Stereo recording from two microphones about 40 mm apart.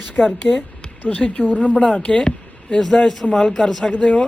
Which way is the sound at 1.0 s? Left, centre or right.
Left.